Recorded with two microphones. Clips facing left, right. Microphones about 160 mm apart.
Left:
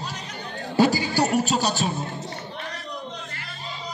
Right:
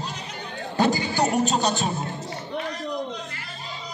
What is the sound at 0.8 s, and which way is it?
Music, 20° right (ahead or behind).